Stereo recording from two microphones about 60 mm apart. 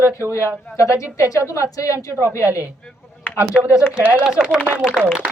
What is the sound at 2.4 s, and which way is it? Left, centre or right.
Speech, right.